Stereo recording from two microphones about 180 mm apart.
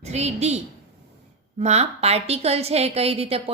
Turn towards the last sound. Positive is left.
turn(degrees=-35)  # may be behind; listen again after turning